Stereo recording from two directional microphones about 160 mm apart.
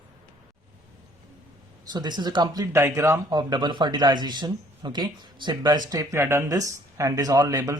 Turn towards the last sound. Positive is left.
turn(degrees=-20)  # may be behind; listen again after turning